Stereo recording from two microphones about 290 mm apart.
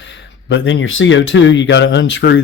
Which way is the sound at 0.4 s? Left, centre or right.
Left.